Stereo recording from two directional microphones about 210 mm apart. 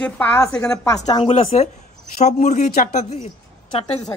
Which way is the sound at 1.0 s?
25° left (ahead or behind).